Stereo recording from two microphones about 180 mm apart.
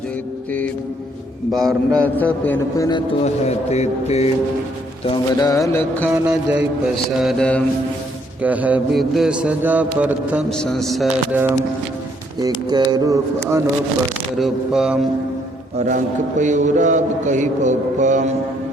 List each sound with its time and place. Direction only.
1.5 s a man's voice: centre (ahead or behind); by 3.0 s 20° left (ahead or behind)
3.2 s speech: 35° left (ahead or behind)
5.0 s a sound: 25° left (ahead or behind)
6.1 s mantra: 10° right (ahead or behind)
8.4 s mantra: 10° right (ahead or behind)
10.6 s mantra: centre (ahead or behind)
12.7 s speech: 20° right (ahead or behind)
14.3 s mantra: centre (ahead or behind)
16.4 s mantra: 40° right (ahead or behind)